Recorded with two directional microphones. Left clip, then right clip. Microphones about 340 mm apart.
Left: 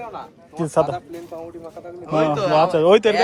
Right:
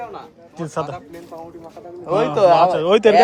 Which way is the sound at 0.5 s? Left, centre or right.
Centre.